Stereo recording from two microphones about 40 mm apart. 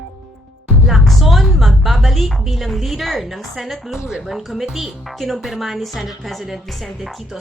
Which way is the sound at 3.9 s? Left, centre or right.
Centre.